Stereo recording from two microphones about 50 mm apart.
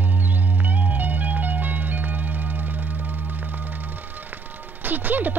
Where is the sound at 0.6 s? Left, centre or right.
Right.